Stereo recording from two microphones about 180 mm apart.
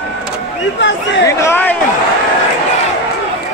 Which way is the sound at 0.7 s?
85° left.